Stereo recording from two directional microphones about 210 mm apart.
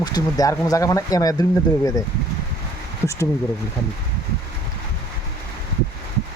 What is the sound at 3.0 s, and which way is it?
Speech, 15° left (ahead or behind).